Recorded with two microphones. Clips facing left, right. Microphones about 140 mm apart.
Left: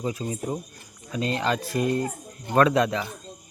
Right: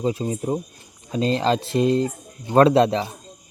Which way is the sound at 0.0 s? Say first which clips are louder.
Right 5 dB; 30° right (ahead or behind).